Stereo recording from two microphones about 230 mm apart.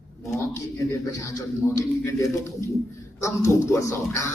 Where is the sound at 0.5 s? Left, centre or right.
Centre.